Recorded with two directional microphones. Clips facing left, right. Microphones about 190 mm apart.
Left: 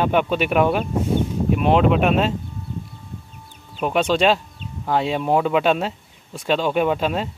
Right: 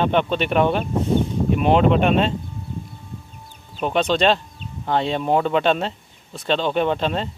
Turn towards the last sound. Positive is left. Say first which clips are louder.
# left 1 dB
turn(degrees=5)  # may be behind; listen again after turning